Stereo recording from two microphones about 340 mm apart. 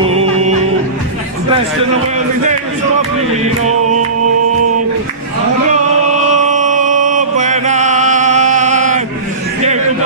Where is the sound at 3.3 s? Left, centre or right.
Centre.